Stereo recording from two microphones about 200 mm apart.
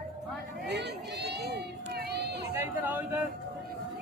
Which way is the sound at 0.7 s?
60° right (ahead or behind).